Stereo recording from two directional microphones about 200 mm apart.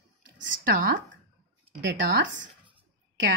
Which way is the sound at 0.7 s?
45° right (ahead or behind).